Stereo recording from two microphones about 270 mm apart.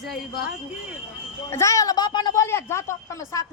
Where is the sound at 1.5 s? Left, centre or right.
Centre.